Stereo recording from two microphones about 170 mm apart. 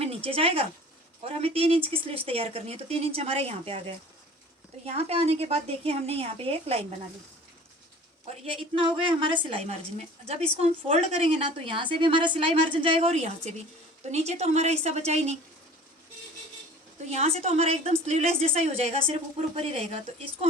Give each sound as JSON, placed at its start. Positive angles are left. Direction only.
{"t": 0.0, "sound": "a woman's voice", "side_deg": -35}
{"t": 8.4, "sound": "a woman's voice", "side_deg": -30}
{"t": 17.1, "sound": "a woman's voice", "side_deg": -40}